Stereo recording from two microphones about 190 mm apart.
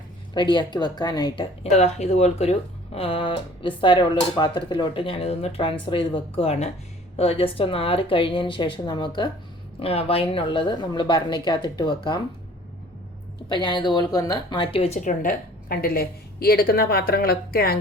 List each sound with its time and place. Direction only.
0.3 s speech: 25° left (ahead or behind)
1.7 s speech: 35° left (ahead or behind)
13.5 s a woman's voice: 25° left (ahead or behind); by 17.7 s 55° left (ahead or behind)